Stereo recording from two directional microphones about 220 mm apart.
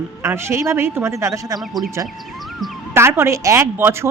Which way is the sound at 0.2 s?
10° right (ahead or behind).